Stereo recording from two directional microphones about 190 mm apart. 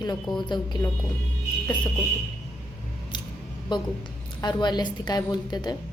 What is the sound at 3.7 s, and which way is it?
Speech, 20° left (ahead or behind).